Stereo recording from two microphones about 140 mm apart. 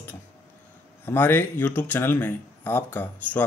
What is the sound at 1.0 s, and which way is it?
Speech, 15° left (ahead or behind).